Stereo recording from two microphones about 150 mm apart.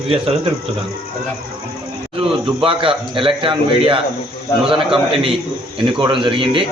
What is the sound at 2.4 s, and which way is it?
A man's voice, 35° right (ahead or behind).